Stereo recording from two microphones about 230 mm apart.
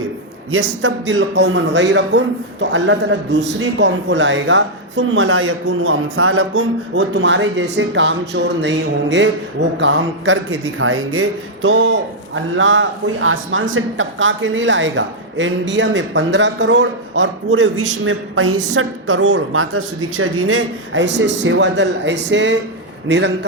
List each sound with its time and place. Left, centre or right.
0.8 s a man's voice: right